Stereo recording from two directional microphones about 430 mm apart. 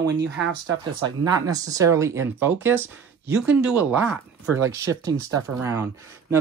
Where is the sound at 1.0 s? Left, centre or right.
Centre.